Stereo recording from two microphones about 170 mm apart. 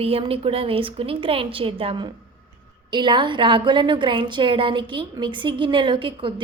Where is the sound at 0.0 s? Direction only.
35° right (ahead or behind).